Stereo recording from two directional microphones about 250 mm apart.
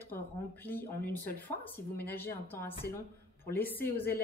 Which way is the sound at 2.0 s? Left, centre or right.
Centre.